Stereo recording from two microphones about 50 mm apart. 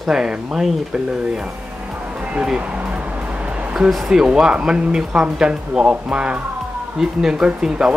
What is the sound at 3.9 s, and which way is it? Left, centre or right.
Speech, centre.